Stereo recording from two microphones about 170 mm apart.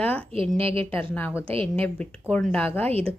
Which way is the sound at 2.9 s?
35° right (ahead or behind).